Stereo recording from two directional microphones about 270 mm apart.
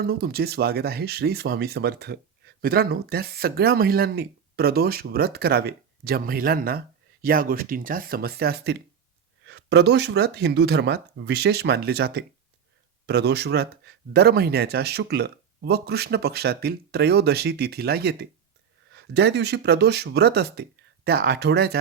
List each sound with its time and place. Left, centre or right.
0.0 s speech: right